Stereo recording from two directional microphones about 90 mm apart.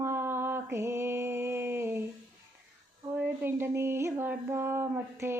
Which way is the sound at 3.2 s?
25° right (ahead or behind).